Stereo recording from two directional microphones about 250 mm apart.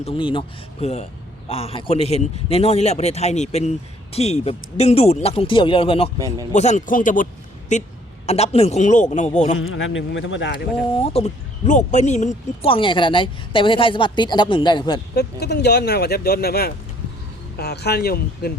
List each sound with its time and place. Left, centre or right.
0.0 s a man's voice: left
6.1 s a man's voice: centre
6.5 s a man's voice: left
9.6 s speech: left
10.9 s a man's voice: left
15.1 s speech: left